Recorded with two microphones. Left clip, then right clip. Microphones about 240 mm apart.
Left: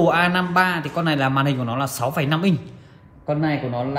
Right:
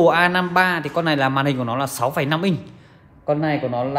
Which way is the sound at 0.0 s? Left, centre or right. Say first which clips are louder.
Right 2 dB; right.